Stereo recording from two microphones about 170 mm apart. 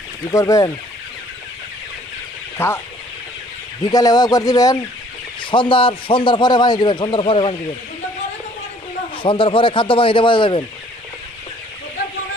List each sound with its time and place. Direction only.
0.3 s a man's voice: 20° left (ahead or behind)
2.5 s speech: 15° left (ahead or behind)
3.8 s a man's voice: 25° left (ahead or behind)
9.2 s speech: 30° left (ahead or behind)